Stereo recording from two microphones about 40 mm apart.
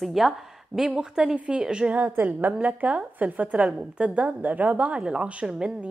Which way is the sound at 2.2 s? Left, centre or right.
Right.